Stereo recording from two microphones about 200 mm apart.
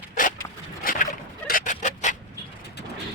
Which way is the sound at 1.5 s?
40° left (ahead or behind).